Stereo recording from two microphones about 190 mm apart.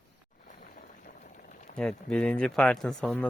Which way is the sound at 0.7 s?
45° left (ahead or behind).